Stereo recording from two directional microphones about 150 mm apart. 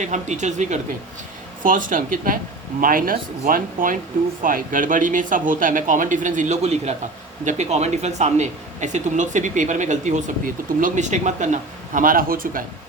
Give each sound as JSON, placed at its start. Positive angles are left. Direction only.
{"t": 0.0, "sound": "speech", "side_deg": -50}
{"t": 1.6, "sound": "speech", "side_deg": -60}